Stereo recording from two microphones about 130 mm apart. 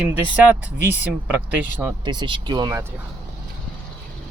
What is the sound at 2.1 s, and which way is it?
Speech, 35° right (ahead or behind).